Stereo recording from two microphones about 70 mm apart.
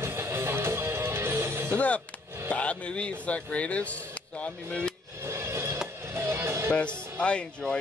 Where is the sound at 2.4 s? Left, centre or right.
Centre.